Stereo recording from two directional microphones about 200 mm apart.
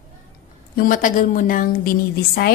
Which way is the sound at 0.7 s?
40° left (ahead or behind).